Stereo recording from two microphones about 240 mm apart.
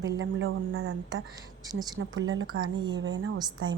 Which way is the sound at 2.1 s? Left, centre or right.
Right.